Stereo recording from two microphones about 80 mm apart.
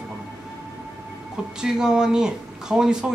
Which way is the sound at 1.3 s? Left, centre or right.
Centre.